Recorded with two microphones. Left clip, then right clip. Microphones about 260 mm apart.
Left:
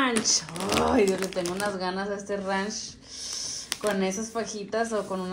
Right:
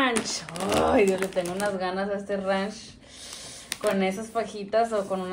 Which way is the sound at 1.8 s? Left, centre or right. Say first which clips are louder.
Right 2 dB; centre.